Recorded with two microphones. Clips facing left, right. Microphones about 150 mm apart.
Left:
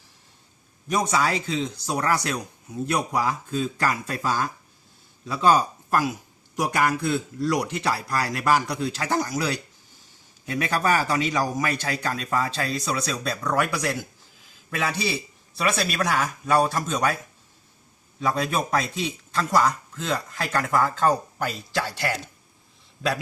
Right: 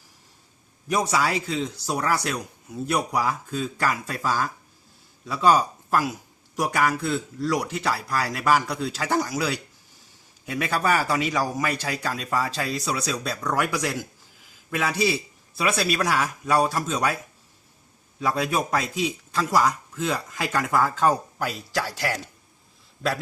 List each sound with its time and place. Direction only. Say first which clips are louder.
0.9 s a man's voice: even; 5° right (ahead or behind)
18.2 s a man's voice: even; 5° right (ahead or behind)